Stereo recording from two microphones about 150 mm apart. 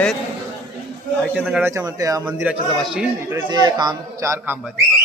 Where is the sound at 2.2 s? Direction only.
10° right (ahead or behind).